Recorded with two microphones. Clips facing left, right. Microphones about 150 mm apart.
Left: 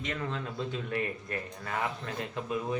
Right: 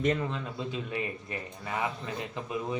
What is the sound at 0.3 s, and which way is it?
A man's voice, 5° right (ahead or behind).